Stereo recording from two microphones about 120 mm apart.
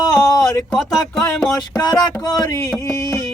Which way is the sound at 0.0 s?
30° left (ahead or behind).